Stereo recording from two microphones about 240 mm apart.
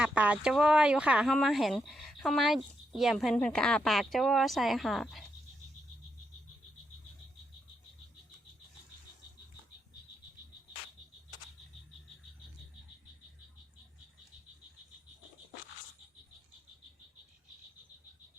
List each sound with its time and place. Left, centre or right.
0.0 s speech: centre